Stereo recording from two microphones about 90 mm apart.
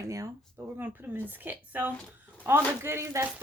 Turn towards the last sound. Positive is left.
turn(degrees=-30)  # may be behind; listen again after turning